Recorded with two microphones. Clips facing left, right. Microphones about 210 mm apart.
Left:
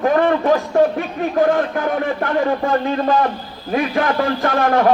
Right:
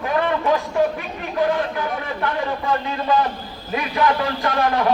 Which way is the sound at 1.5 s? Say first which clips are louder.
Left 5 dB; 50° left (ahead or behind).